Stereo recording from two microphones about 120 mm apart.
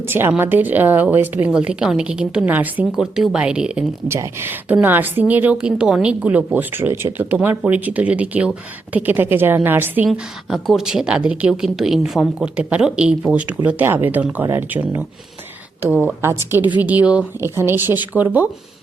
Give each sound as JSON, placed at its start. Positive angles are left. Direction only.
{"t": 0.0, "sound": "a woman's voice", "side_deg": -20}
{"t": 4.1, "sound": "a woman's voice", "side_deg": -20}
{"t": 10.1, "sound": "a woman's voice", "side_deg": 0}